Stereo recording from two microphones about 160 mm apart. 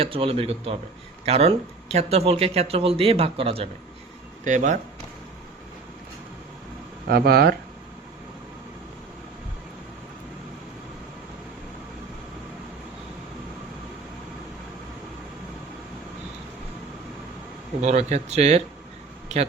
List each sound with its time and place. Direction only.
0.0 s speech: 35° right (ahead or behind)
4.4 s speech: 50° right (ahead or behind)
7.1 s speech: 75° right (ahead or behind)
17.8 s speech: 45° right (ahead or behind)